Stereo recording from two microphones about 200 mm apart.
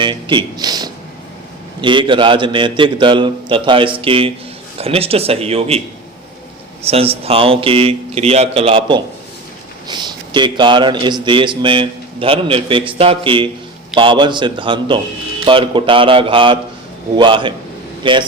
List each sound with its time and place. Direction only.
0.0 s a man's voice: 25° right (ahead or behind)
6.8 s a man's voice: 30° right (ahead or behind)